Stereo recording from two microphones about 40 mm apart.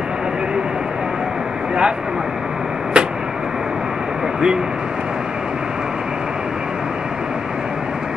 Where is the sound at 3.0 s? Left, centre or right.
Right.